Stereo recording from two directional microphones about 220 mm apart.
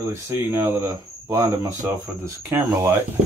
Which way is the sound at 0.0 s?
10° right (ahead or behind).